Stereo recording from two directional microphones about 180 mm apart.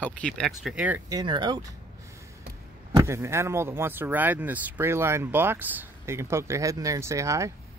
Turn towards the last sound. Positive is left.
turn(degrees=-15)  # may be behind; listen again after turning